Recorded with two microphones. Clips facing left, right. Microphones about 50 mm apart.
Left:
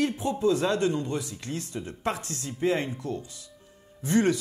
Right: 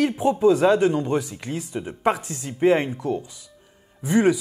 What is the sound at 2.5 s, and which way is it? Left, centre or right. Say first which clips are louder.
Speech: right 8 dB; right.